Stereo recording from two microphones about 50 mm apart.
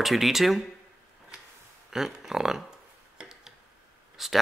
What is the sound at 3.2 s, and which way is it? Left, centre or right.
Tick-tock, centre.